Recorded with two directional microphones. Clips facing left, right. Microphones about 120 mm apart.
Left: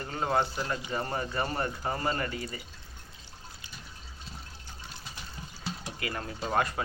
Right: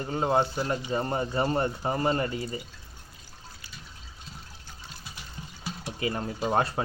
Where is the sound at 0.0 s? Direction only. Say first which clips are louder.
Right 4 dB; 20° right (ahead or behind).